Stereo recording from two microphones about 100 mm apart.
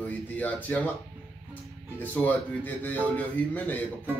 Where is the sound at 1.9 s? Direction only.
15° left (ahead or behind).